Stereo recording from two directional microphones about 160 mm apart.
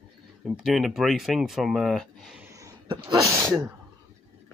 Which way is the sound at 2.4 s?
20° right (ahead or behind).